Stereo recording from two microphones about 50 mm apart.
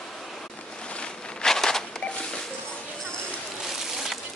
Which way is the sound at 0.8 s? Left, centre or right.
Left.